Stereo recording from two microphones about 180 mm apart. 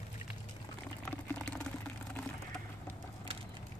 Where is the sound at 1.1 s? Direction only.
10° left (ahead or behind).